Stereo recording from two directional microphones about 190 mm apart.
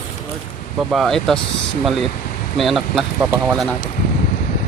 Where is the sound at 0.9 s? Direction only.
Centre (ahead or behind).